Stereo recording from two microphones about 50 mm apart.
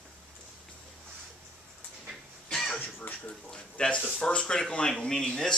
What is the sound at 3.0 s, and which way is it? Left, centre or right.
Speech, left.